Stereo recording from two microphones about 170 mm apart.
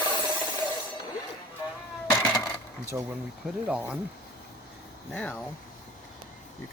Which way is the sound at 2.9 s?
10° right (ahead or behind).